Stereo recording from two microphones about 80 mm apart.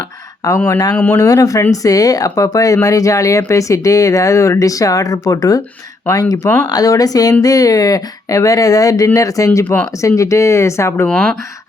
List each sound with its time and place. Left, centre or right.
0.4 s speech: left
0.9 s speech: left
1.2 s speech: left
11.1 s speech: centre